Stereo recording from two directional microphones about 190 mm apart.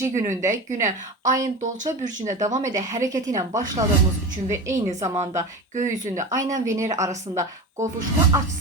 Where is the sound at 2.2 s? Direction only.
15° right (ahead or behind).